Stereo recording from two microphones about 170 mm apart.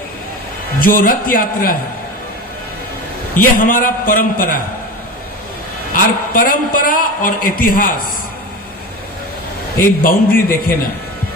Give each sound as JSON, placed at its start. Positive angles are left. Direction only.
{"t": 0.8, "sound": "a man's voice", "side_deg": 55}
{"t": 3.3, "sound": "a man's voice", "side_deg": 55}
{"t": 5.9, "sound": "a man's voice", "side_deg": 55}
{"t": 9.7, "sound": "a man's voice", "side_deg": 55}